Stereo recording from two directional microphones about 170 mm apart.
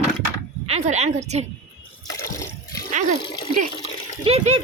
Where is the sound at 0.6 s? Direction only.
40° right (ahead or behind).